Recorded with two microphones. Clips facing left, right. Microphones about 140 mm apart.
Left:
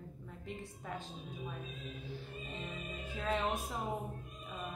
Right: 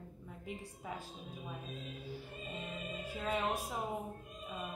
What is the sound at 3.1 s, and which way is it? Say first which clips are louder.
Speech: left 1 dB; 10° right (ahead or behind).